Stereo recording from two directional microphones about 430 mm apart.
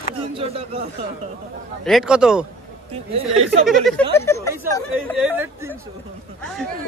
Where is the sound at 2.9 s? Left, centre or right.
Centre.